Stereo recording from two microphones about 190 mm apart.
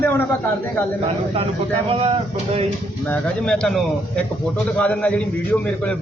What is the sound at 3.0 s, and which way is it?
A man's voice, 5° left (ahead or behind).